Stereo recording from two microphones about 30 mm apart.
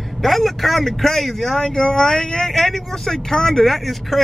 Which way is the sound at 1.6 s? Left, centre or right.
Centre.